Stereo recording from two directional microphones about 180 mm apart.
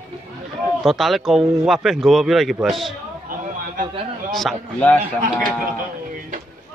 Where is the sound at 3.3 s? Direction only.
50° right (ahead or behind).